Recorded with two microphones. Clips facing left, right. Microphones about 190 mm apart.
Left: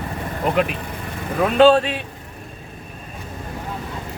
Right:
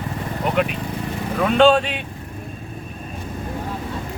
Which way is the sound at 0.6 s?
Centre (ahead or behind).